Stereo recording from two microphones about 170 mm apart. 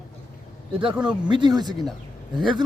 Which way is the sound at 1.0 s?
25° right (ahead or behind).